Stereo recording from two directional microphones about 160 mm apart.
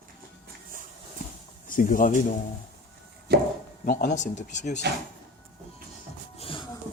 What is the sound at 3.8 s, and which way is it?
Speech, 55° left (ahead or behind).